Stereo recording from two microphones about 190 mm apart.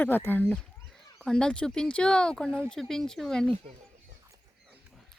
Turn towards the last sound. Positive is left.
turn(degrees=0)  # may be behind; listen again after turning